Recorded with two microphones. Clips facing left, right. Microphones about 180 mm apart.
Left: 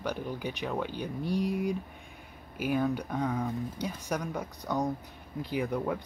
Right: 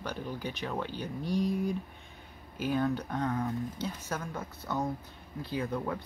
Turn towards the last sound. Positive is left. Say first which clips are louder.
# left 3 dB
turn(degrees=15)  # may be behind; listen again after turning